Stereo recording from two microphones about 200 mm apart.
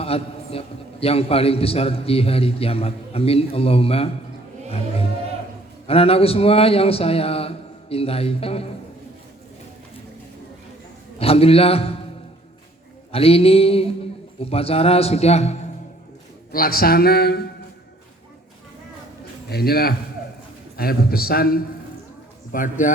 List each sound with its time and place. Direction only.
0.0 s a sound: 30° left (ahead or behind)
1.0 s a man's voice: 30° left (ahead or behind)
5.9 s a man's voice: 30° left (ahead or behind)
11.2 s a man's voice: 30° left (ahead or behind)
13.1 s a man's voice: 30° left (ahead or behind)
16.5 s speech: 45° left (ahead or behind)
19.5 s a man's voice: 50° left (ahead or behind)